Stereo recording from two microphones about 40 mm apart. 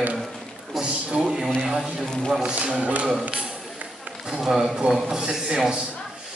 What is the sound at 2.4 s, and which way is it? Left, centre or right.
Speech, right.